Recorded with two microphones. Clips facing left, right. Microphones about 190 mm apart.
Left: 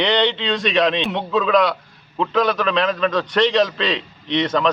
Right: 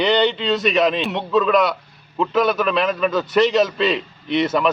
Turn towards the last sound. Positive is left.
turn(degrees=-5)  # may be behind; listen again after turning